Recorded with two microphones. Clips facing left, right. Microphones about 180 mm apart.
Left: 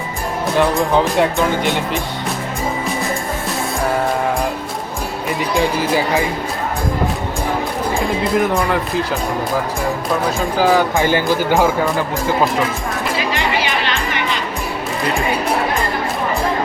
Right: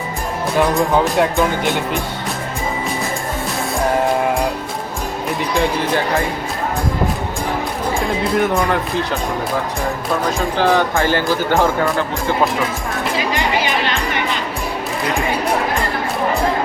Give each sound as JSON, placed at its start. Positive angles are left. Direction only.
{"t": 0.7, "sound": "speech", "side_deg": 0}
{"t": 5.5, "sound": "speech", "side_deg": 0}
{"t": 7.9, "sound": "speech", "side_deg": 0}
{"t": 10.6, "sound": "speech", "side_deg": 5}
{"t": 10.9, "sound": "speech", "side_deg": 15}